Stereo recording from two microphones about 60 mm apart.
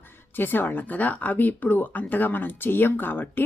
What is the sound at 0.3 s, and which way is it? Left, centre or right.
Speech, left.